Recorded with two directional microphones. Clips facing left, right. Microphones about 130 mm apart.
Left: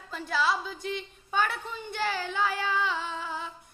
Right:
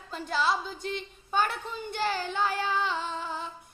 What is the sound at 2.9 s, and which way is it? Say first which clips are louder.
Music: right 1 dB; 35° right (ahead or behind).